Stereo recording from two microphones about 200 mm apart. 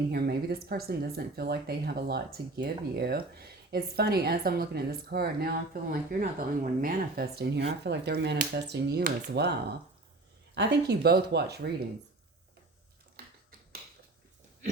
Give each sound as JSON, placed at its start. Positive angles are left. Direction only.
{"t": 0.1, "sound": "speech", "side_deg": -50}